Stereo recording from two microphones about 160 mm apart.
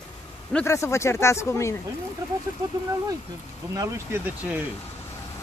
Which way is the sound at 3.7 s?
15° right (ahead or behind).